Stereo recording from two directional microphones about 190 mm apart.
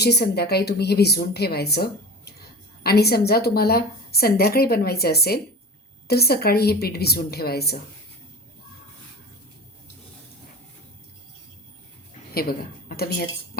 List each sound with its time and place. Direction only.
0.0 s speech: 60° left (ahead or behind)
12.3 s a woman's voice: 50° left (ahead or behind)